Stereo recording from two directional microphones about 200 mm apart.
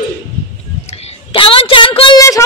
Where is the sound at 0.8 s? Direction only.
30° left (ahead or behind).